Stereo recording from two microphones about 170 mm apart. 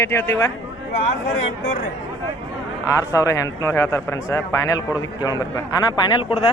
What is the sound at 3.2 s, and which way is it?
A man's voice, 20° left (ahead or behind).